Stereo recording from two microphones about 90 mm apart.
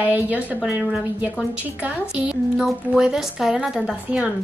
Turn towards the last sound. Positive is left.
turn(degrees=-5)  # may be behind; listen again after turning